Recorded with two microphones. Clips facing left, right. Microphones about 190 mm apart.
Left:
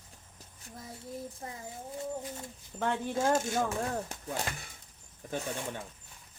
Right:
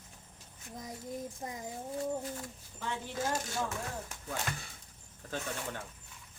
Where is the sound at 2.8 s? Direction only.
55° left (ahead or behind).